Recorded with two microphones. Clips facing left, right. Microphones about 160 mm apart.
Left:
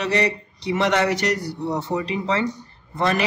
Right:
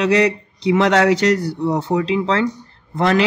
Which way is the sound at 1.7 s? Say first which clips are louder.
Right 6 dB; 70° right (ahead or behind).